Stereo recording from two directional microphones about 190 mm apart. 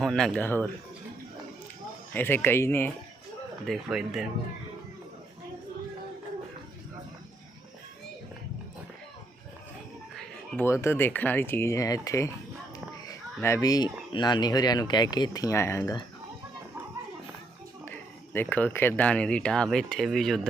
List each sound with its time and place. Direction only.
0.0 s speech: 5° left (ahead or behind)
2.1 s speech: 10° left (ahead or behind)
3.7 s speech: centre (ahead or behind)
10.6 s speech: 15° left (ahead or behind)
18.3 s speech: 10° left (ahead or behind)